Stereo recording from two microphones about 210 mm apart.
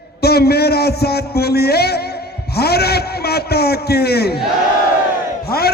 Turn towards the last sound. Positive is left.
turn(degrees=50)  # may be behind; listen again after turning